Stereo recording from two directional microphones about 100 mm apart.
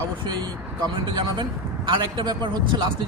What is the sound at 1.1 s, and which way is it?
Speech, 55° right (ahead or behind).